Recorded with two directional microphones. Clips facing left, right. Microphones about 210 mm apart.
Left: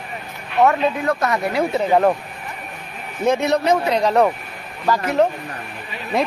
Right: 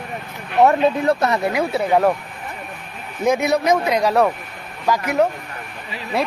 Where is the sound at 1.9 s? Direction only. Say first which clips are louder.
Even; 5° left (ahead or behind).